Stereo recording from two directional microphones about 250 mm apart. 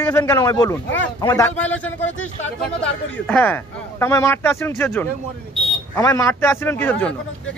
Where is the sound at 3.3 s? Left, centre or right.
Centre.